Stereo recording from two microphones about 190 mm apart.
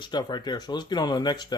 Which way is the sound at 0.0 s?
20° left (ahead or behind).